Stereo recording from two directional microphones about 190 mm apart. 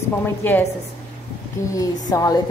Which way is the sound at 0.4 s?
10° left (ahead or behind).